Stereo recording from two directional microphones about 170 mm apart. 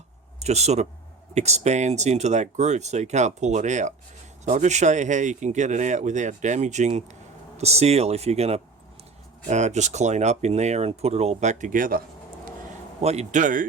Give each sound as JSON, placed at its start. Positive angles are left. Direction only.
{"t": 0.3, "sound": "speech", "side_deg": -40}
{"t": 13.0, "sound": "speech", "side_deg": -40}